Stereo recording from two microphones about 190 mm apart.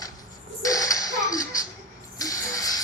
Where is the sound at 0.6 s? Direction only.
20° left (ahead or behind).